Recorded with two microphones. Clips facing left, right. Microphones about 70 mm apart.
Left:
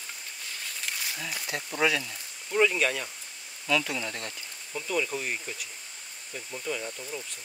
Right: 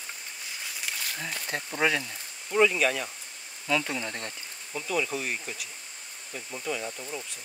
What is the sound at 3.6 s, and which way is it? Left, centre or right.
Speech, right.